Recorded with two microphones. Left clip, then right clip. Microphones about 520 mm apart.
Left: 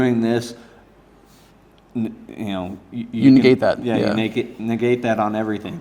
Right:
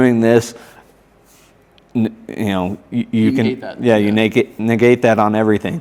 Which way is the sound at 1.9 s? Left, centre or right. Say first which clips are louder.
Right 7 dB; right.